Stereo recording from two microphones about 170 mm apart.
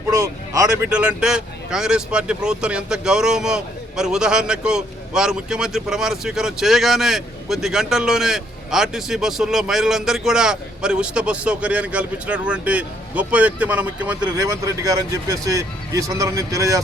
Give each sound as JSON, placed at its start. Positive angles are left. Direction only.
{"t": 0.1, "sound": "a sound", "side_deg": -20}
{"t": 0.9, "sound": "speech", "side_deg": -5}
{"t": 14.3, "sound": "speech", "side_deg": -20}